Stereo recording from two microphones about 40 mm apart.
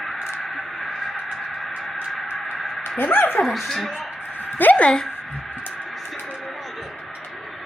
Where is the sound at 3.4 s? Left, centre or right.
Centre.